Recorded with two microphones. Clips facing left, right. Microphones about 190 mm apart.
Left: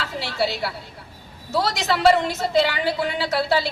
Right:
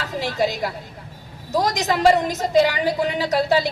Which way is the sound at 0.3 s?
15° right (ahead or behind).